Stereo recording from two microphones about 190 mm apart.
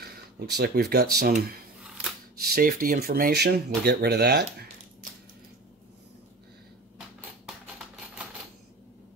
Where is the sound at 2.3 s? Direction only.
55° right (ahead or behind).